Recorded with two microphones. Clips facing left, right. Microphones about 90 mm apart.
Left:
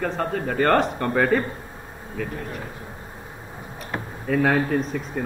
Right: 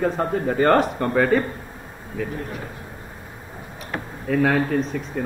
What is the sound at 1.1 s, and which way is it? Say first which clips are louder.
Speech: right 2 dB; centre (ahead or behind).